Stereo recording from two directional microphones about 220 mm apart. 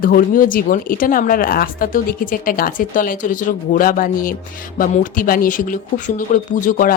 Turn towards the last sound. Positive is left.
turn(degrees=35)  # may be behind; listen again after turning